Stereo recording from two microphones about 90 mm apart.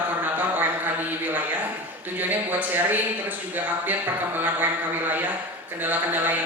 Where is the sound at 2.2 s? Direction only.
20° right (ahead or behind).